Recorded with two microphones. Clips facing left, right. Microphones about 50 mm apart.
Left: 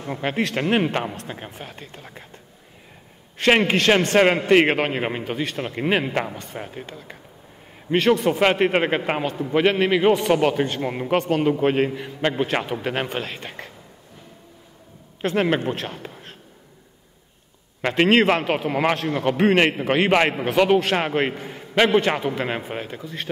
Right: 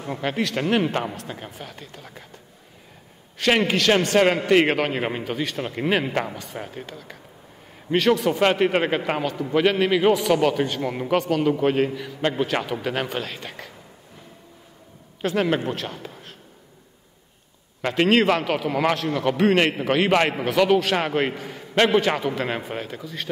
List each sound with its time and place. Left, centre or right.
0.1 s a man's voice: centre
1.5 s a man's voice: left
3.3 s a man's voice: left
4.9 s a man's voice: centre; by 12.3 s left
12.3 s a man's voice: centre
15.2 s a man's voice: left
15.9 s a sound: centre
17.8 s a man's voice: left; by 23.0 s centre
23.0 s a man's voice: centre